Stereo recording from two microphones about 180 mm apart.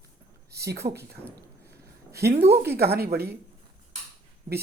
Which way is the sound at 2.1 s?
65° right (ahead or behind).